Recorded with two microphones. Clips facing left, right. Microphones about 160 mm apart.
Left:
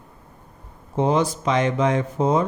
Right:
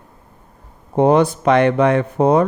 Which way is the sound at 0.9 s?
60° right (ahead or behind).